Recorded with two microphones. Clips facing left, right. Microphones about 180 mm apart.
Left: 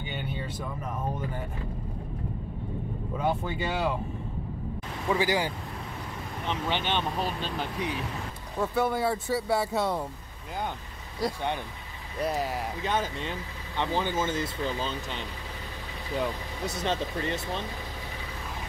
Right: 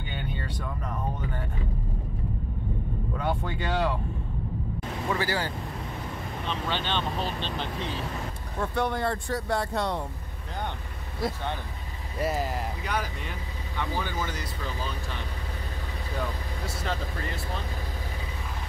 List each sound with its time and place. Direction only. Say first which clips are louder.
0.0 s vehicle: left 1 dB; 10° left (ahead or behind)
3.2 s speech: left 3 dB; 5° left (ahead or behind)
5.1 s speech: left 4 dB; 15° left (ahead or behind)
12.2 s speech: even; centre (ahead or behind)
12.8 s speech: left 3 dB; 25° left (ahead or behind)